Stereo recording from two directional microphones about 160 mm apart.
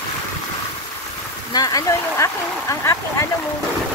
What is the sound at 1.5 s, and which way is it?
Speech, 20° left (ahead or behind).